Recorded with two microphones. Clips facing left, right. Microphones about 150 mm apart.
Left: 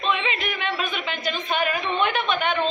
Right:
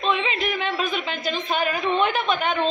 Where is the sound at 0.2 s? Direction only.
30° right (ahead or behind).